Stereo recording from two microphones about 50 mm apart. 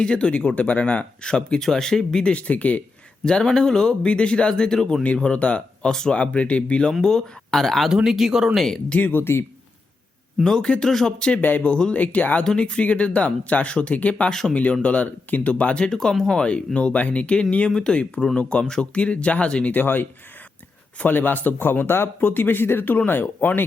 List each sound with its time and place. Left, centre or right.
0.0 s speech: left
2.3 s speech: left
3.2 s speech: centre
5.9 s speech: centre
6.1 s speech: left
7.0 s speech: centre
7.9 s speech: centre
8.5 s speech: centre
8.9 s speech: left
9.1 s speech: left
10.4 s speech: centre
15.9 s speech: centre
16.5 s speech: left
19.8 s speech: left